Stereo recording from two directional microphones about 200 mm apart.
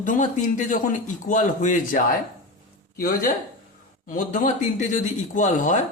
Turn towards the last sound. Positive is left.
turn(degrees=40)  # may be behind; listen again after turning